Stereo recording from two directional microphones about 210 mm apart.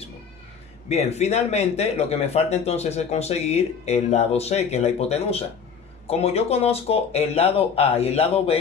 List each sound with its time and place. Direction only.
0.8 s speech: 30° left (ahead or behind)